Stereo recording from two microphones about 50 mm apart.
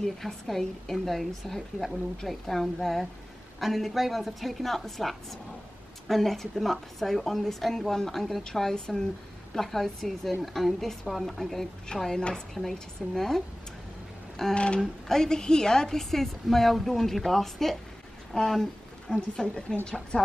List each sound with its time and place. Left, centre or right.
0.0 s a woman's voice: centre
14.5 s a woman's voice: left; by 17.7 s centre
18.3 s a sound: centre
19.3 s a woman's voice: centre